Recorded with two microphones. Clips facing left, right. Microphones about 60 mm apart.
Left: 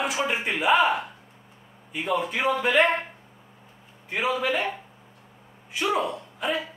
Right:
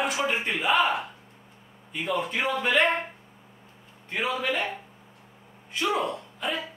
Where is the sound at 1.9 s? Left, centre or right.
Centre.